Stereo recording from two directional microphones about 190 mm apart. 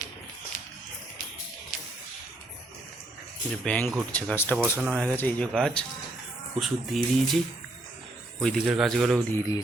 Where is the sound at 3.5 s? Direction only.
5° left (ahead or behind).